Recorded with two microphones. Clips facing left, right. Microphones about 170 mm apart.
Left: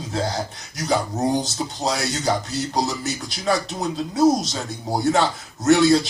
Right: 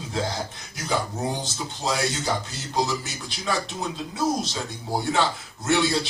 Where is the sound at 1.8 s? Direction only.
35° left (ahead or behind).